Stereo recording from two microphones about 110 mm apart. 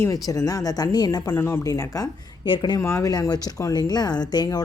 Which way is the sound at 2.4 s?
45° left (ahead or behind).